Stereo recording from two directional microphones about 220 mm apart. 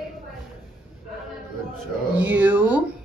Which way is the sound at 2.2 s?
10° right (ahead or behind).